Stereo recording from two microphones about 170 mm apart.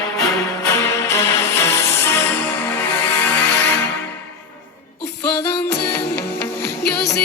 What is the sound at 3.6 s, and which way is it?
Music, 85° left.